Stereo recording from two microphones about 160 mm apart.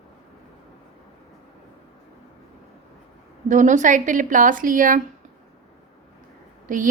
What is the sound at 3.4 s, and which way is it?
A woman's voice, 50° right (ahead or behind).